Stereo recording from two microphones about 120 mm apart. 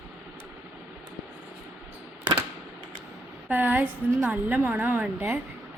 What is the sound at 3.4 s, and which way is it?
A woman's voice, 15° right (ahead or behind).